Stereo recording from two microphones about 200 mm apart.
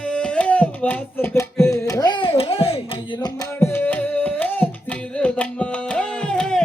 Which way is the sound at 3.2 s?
10° left (ahead or behind).